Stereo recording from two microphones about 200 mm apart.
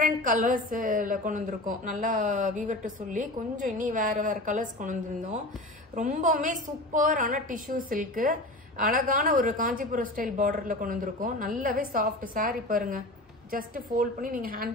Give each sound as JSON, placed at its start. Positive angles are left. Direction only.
{"t": 0.0, "sound": "a woman's voice", "side_deg": -45}